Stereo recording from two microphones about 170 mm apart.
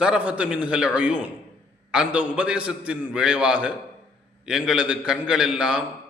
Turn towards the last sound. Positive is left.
turn(degrees=-5)  # may be behind; listen again after turning